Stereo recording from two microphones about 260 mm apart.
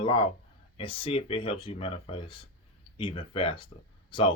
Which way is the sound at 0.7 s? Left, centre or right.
Left.